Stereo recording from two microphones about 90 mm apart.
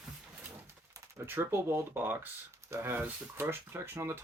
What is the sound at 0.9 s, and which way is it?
Speech, 30° right (ahead or behind).